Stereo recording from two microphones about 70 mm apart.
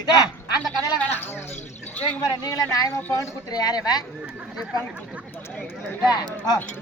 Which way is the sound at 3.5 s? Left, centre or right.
Left.